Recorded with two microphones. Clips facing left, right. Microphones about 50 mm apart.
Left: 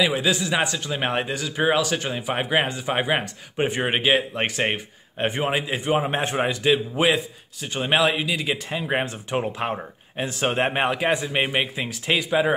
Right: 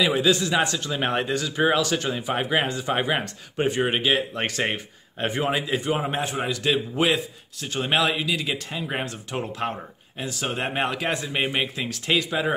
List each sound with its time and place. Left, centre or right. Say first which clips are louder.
0.0 s speech: right 1 dB; centre
6.1 s a man's voice: left 3 dB; left
6.6 s speech: left 2 dB; centre
8.6 s speech: left 4 dB; left
10.2 s a man's voice: left 5 dB; left
10.7 s speech: left 3 dB; centre